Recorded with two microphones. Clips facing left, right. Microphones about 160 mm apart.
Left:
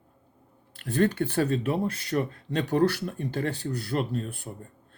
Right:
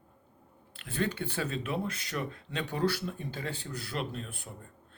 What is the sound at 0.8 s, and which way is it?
Speech, 45° left (ahead or behind).